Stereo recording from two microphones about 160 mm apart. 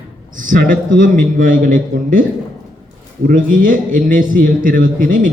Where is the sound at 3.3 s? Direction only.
60° right (ahead or behind).